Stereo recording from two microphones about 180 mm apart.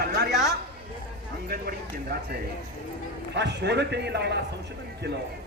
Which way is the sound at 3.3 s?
70° right (ahead or behind).